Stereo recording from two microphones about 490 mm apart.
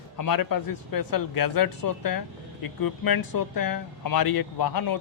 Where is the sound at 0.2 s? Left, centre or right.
Left.